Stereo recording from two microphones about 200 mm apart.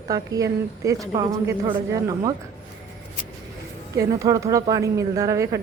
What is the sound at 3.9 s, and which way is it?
A woman's voice, 15° right (ahead or behind).